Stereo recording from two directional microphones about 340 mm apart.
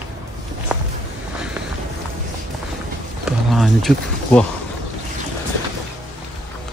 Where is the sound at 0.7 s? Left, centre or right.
Centre.